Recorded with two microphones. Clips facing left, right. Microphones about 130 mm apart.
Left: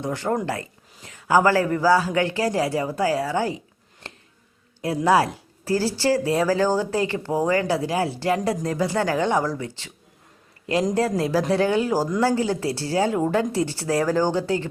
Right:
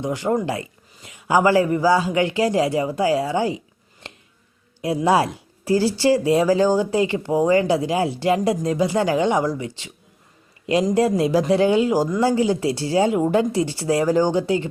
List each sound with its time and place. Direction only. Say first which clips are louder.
0.0 s speech: right 3 dB; 15° right (ahead or behind)
4.0 s a sound: right 1 dB; 20° right (ahead or behind)
5.0 s speech: even; 20° right (ahead or behind)
11.2 s speech: right 3 dB; 20° right (ahead or behind)